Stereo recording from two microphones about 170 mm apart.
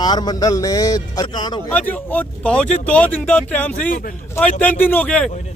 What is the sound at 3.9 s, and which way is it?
Speech, 55° left (ahead or behind).